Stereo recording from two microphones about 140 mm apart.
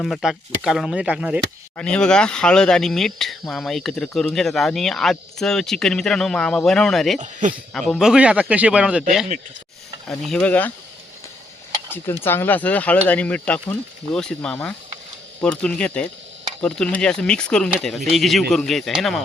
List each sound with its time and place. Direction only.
0.0 s speech: centre (ahead or behind)
1.7 s speech: 5° left (ahead or behind)
7.2 s speech: 60° right (ahead or behind)
7.7 s speech: 5° left (ahead or behind)
10.1 s speech: 5° left (ahead or behind)
12.2 s speech: 15° left (ahead or behind)